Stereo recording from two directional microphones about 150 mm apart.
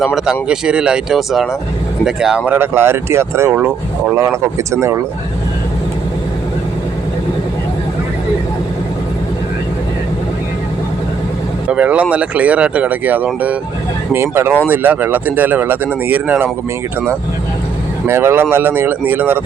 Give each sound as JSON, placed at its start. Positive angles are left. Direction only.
{"t": 0.0, "sound": "speech", "side_deg": -5}
{"t": 11.7, "sound": "speech", "side_deg": -10}
{"t": 18.1, "sound": "speech", "side_deg": -15}